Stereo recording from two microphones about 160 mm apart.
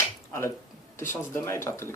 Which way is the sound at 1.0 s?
15° left (ahead or behind).